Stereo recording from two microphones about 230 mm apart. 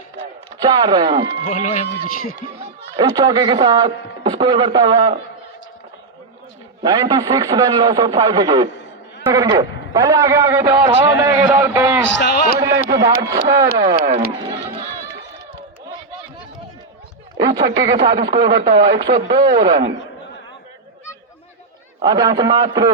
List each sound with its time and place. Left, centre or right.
0.6 s speech: centre
1.5 s a man's voice: left
2.9 s speech: centre
6.8 s a man's voice: centre
12.1 s a man's voice: left
12.5 s a man's voice: centre
17.3 s speech: centre
22.0 s a man's voice: centre